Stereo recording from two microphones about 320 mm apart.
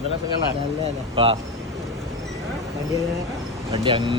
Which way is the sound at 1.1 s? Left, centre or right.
Centre.